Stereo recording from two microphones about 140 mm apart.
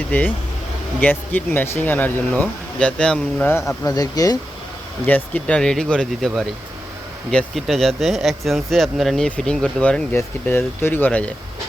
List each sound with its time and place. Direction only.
0.1 s speech: 15° left (ahead or behind)
3.5 s speech: 20° left (ahead or behind)
5.0 s speech: 10° left (ahead or behind)